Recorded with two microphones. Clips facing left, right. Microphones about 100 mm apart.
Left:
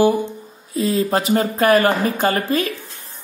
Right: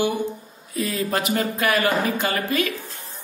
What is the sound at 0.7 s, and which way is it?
A woman's voice, 30° left (ahead or behind).